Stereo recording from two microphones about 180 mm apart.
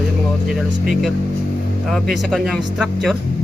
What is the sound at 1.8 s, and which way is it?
Speech, centre (ahead or behind).